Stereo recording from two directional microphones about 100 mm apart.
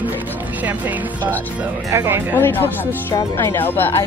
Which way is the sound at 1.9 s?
30° right (ahead or behind).